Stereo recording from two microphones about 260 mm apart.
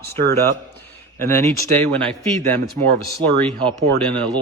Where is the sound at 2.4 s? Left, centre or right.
Right.